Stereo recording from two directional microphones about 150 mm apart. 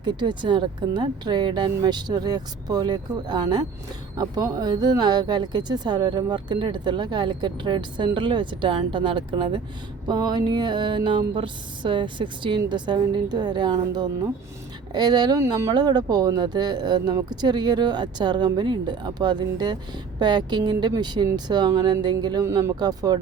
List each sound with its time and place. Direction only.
0.0 s speech: 30° right (ahead or behind)